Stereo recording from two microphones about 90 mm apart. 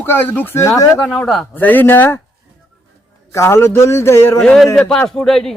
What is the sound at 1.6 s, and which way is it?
Speech, 20° left (ahead or behind).